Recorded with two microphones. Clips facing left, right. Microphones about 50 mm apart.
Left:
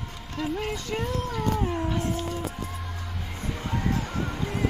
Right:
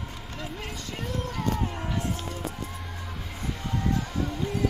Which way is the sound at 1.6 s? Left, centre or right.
Centre.